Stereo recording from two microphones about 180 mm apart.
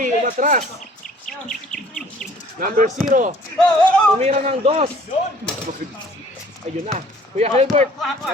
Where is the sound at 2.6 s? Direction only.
50° right (ahead or behind).